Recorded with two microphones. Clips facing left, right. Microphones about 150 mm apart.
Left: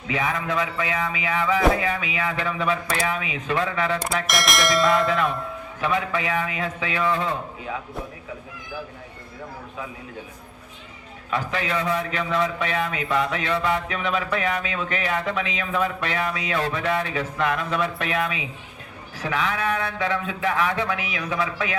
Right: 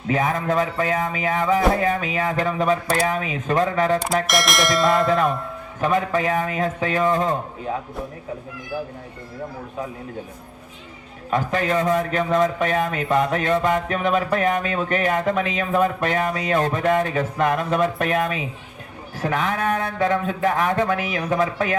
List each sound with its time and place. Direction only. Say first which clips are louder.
0.1 s a man's voice: right 4 dB; 45° right (ahead or behind)
4.3 s speech: left 1 dB; centre (ahead or behind)
5.8 s a man's voice: right 4 dB; 45° right (ahead or behind)
11.3 s a man's voice: right 5 dB; 45° right (ahead or behind)